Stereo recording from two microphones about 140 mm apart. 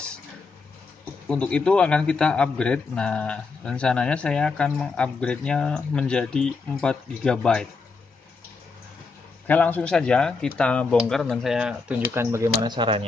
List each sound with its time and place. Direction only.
1.3 s a man's voice: 10° left (ahead or behind)
9.5 s a man's voice: 10° left (ahead or behind)
11.5 s speech: 10° right (ahead or behind)
12.6 s speech: 35° right (ahead or behind)